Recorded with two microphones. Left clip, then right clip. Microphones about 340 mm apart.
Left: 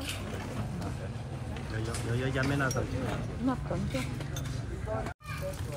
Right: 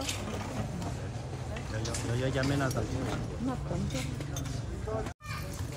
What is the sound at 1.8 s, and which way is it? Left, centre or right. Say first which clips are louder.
Speech: even; centre.